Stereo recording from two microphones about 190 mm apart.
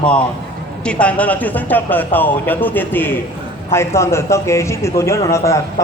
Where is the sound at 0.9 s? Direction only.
5° left (ahead or behind).